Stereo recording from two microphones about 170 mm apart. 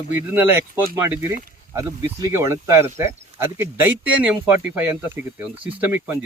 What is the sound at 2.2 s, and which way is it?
Speech, 15° right (ahead or behind).